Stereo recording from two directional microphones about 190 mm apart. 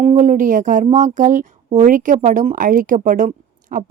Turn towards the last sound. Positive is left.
turn(degrees=-45)  # may be behind; listen again after turning